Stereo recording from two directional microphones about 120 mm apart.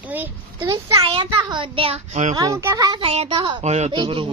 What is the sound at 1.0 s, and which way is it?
A child's voice, 50° right (ahead or behind).